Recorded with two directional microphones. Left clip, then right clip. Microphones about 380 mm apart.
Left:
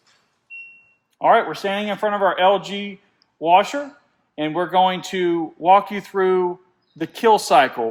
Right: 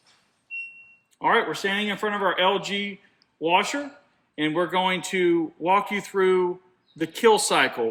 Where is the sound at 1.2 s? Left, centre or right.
Left.